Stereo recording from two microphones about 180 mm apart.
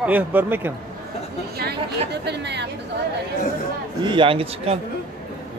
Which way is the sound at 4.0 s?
25° right (ahead or behind).